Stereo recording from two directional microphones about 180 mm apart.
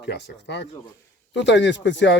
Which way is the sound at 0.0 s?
75° left (ahead or behind).